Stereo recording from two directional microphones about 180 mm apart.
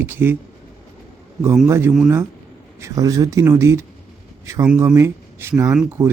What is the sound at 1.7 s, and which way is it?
Speech, 15° right (ahead or behind).